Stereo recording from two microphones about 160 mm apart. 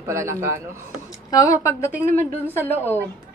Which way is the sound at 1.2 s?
20° left (ahead or behind).